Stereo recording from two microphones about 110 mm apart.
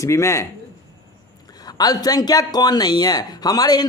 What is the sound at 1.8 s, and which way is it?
Speech, 35° left (ahead or behind).